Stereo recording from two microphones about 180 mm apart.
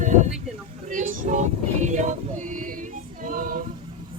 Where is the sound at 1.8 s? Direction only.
45° right (ahead or behind).